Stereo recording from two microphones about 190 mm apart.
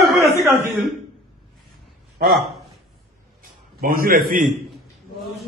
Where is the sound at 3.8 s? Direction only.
50° right (ahead or behind).